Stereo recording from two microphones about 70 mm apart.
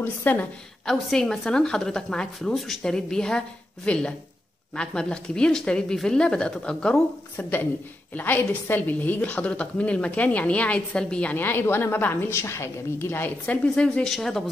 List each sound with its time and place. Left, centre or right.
0.0 s a woman's voice: left
0.8 s a woman's voice: centre
8.1 s a woman's voice: left
13.5 s a woman's voice: centre
14.0 s speech: centre